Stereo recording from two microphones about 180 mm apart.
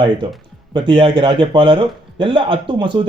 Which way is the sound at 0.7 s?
30° right (ahead or behind).